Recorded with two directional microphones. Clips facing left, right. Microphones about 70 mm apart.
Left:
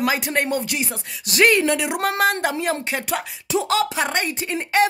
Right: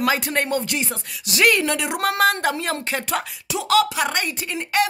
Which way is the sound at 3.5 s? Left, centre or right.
Left.